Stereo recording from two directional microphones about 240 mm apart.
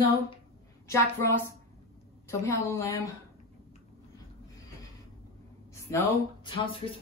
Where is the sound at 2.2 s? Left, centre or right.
Centre.